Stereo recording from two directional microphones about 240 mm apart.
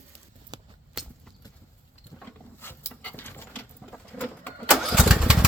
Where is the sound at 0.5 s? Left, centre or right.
Centre.